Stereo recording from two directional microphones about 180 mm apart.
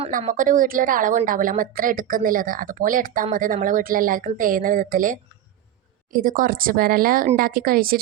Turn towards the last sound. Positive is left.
turn(degrees=-55)  # may be behind; listen again after turning